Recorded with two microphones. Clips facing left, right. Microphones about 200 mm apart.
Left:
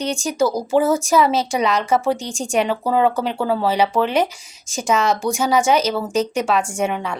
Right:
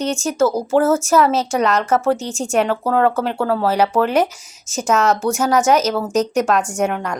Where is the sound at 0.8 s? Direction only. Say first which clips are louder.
Right 3 dB; 15° left (ahead or behind).